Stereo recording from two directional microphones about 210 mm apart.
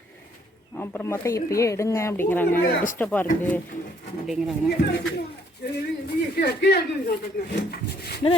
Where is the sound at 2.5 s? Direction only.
40° left (ahead or behind).